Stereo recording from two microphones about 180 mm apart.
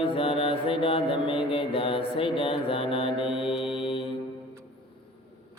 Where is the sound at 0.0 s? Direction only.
30° left (ahead or behind).